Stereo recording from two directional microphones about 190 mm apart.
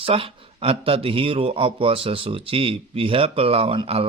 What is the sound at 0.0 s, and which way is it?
Speech, 30° right (ahead or behind).